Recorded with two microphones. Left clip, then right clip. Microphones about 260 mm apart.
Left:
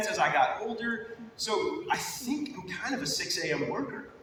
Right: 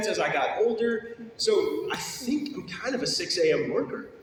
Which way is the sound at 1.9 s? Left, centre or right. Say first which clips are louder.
Right 1 dB; left.